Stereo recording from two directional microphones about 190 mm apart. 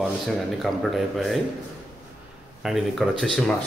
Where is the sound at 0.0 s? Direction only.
Centre (ahead or behind).